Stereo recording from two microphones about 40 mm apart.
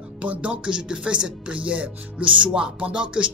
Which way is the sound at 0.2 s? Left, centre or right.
Right.